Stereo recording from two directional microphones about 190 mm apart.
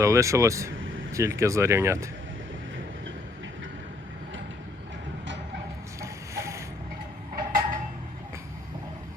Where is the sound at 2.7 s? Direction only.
80° right.